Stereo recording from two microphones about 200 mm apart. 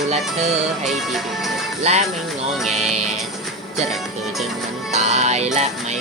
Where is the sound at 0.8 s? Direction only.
Centre (ahead or behind).